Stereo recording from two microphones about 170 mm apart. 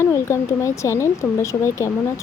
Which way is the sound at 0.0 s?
15° left (ahead or behind).